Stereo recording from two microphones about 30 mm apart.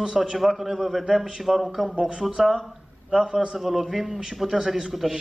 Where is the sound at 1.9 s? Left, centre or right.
Right.